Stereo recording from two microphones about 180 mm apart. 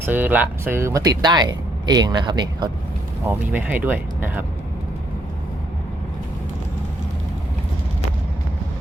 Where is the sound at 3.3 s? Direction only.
10° right (ahead or behind).